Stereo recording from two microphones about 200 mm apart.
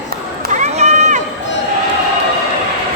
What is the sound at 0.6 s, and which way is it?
Run, 35° right (ahead or behind).